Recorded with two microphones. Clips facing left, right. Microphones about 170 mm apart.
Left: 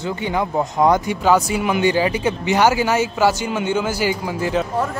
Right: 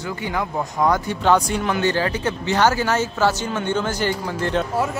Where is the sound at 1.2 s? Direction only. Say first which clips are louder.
Right 1 dB; 5° left (ahead or behind).